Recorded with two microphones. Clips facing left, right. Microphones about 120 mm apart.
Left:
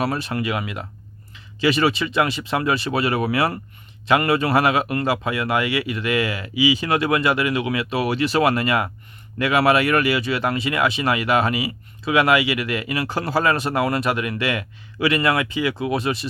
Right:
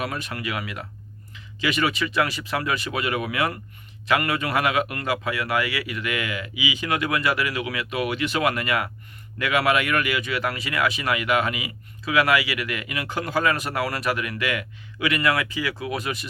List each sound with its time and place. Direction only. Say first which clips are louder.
0.0 s speech: left 6 dB; 30° left (ahead or behind)